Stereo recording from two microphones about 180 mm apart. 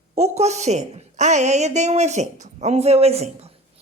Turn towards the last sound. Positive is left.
turn(degrees=-35)  # may be behind; listen again after turning